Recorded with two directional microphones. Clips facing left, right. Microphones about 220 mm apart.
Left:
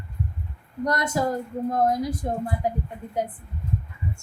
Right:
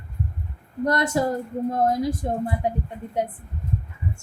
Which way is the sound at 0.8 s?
30° right (ahead or behind).